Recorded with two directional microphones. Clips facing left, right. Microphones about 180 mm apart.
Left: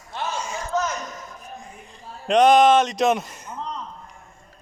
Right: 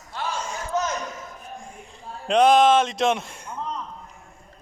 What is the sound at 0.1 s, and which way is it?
Battle cry, 20° left (ahead or behind).